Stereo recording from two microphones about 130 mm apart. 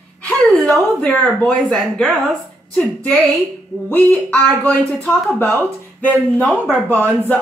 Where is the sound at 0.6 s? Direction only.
Centre (ahead or behind).